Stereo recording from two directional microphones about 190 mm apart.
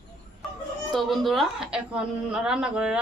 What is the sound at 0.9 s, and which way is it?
A woman's voice, centre (ahead or behind).